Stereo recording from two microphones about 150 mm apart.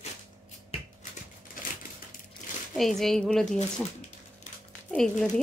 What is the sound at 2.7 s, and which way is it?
Speech, centre (ahead or behind).